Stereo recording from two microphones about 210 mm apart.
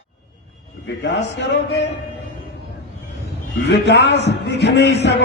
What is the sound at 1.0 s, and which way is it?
Music, 55° left (ahead or behind).